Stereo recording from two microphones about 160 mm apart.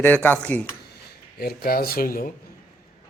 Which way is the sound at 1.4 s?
70° left (ahead or behind).